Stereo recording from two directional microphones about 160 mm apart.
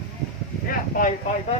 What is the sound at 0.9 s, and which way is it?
Speech, 60° left (ahead or behind).